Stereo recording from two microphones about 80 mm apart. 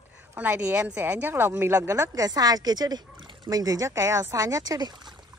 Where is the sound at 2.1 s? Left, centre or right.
Right.